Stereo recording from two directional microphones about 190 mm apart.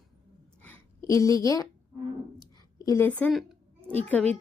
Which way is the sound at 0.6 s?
15° left (ahead or behind).